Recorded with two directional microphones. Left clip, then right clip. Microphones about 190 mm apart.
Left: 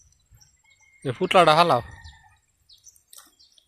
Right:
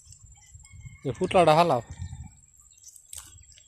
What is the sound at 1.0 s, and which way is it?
Speech, centre (ahead or behind).